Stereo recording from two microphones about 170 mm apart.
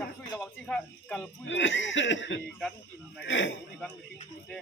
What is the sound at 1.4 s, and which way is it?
Speech, 90° left.